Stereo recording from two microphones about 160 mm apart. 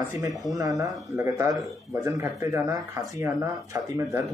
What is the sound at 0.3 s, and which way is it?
Speech, centre (ahead or behind).